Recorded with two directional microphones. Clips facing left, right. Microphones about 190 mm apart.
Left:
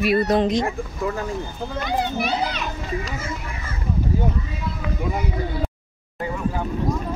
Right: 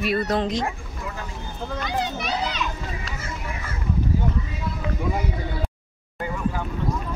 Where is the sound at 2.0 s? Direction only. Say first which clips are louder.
Left 3 dB; 55° left (ahead or behind).